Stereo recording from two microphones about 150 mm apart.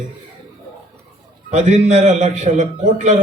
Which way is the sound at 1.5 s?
50° right (ahead or behind).